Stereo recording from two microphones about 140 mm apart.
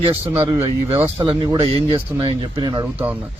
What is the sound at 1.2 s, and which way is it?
A man's voice, 40° right (ahead or behind).